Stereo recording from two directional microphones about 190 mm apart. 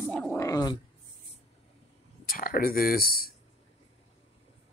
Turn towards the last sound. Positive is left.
turn(degrees=50)  # may be behind; listen again after turning